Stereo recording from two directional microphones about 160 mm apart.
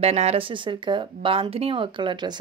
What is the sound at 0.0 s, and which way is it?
Speech, 40° right (ahead or behind).